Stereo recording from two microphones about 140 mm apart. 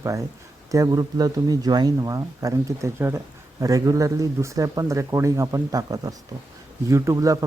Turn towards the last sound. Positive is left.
turn(degrees=-25)  # may be behind; listen again after turning